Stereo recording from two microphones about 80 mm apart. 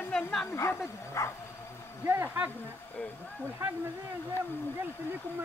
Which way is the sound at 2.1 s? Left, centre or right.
Right.